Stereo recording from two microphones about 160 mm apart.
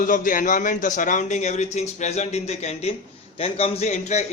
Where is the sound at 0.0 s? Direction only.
55° left (ahead or behind).